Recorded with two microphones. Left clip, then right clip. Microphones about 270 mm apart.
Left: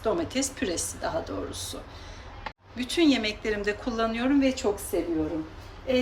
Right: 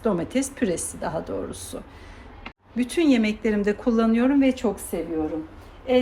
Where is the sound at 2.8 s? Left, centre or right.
Right.